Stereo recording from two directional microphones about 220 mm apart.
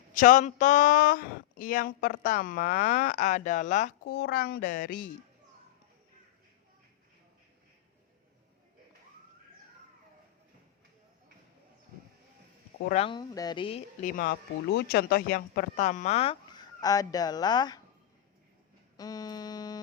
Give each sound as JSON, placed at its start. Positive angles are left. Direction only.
{"t": 0.1, "sound": "speech", "side_deg": 35}
{"t": 12.9, "sound": "speech", "side_deg": 25}
{"t": 14.1, "sound": "speech", "side_deg": 40}
{"t": 18.9, "sound": "music", "side_deg": 15}